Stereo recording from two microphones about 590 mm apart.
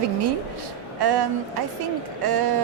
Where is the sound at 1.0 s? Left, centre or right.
Right.